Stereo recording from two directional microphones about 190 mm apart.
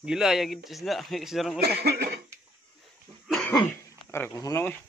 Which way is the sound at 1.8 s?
60° right (ahead or behind).